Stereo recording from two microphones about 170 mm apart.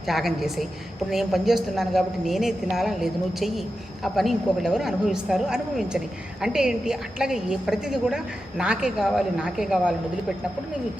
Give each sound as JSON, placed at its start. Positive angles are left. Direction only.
{"t": 0.0, "sound": "a woman's voice", "side_deg": 0}